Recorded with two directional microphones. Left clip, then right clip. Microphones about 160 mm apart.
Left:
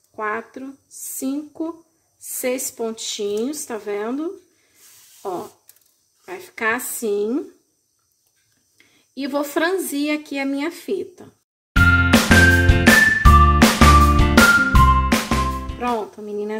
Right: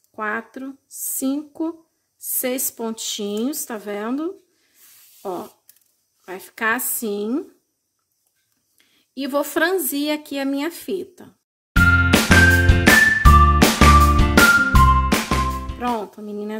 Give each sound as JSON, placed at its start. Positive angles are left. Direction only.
{"t": 0.1, "sound": "speech", "side_deg": -40}
{"t": 8.7, "sound": "speech", "side_deg": -30}
{"t": 11.7, "sound": "music", "side_deg": 0}
{"t": 15.8, "sound": "speech", "side_deg": -25}